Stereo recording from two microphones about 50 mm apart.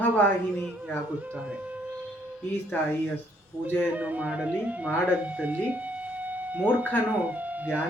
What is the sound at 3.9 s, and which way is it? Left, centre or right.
Speech, right.